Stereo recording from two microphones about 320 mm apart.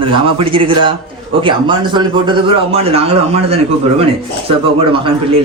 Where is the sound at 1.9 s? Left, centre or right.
Centre.